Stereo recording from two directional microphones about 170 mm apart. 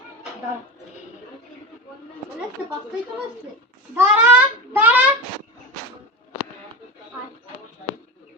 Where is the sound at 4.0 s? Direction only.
10° right (ahead or behind).